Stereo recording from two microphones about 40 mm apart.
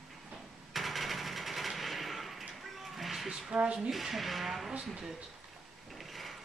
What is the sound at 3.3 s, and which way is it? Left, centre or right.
Speech, centre.